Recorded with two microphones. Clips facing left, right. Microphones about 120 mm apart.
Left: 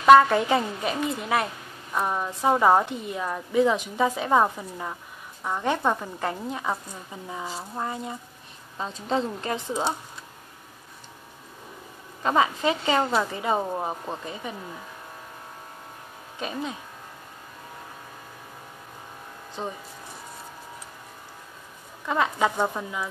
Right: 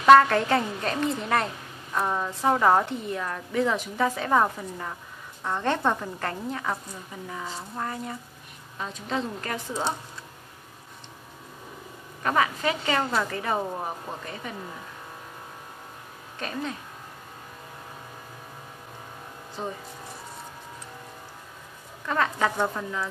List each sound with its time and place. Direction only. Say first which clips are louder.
0.0 s a woman's voice: left 1 dB; 10° left (ahead or behind)
8.7 s a woman's voice: left 4 dB; 35° left (ahead or behind)
9.4 s a woman's voice: left 3 dB; 20° left (ahead or behind)
12.2 s a woman's voice: left 2 dB; 20° left (ahead or behind)
16.3 s a woman's voice: left 1 dB; 15° left (ahead or behind)
19.6 s a woman's voice: even; 20° left (ahead or behind)
22.0 s a woman's voice: left 1 dB; 15° left (ahead or behind)